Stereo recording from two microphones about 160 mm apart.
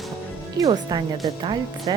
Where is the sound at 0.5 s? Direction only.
25° right (ahead or behind).